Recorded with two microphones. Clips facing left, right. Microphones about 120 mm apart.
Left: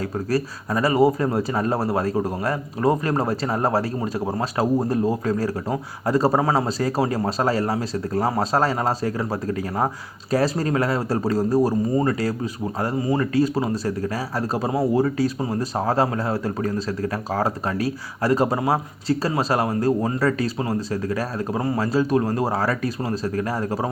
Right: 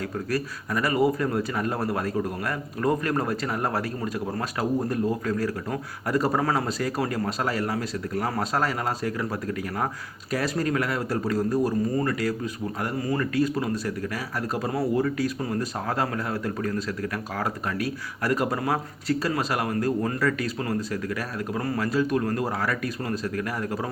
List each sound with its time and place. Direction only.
0.3 s a man's voice: 30° left (ahead or behind)
14.7 s a man's voice: 20° left (ahead or behind)